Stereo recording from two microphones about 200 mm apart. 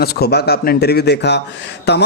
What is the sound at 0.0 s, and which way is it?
A man's voice, 50° left (ahead or behind).